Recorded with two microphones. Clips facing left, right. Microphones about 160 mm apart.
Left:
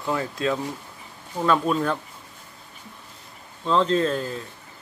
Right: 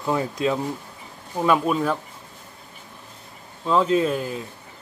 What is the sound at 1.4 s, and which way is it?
Speech, 5° right (ahead or behind).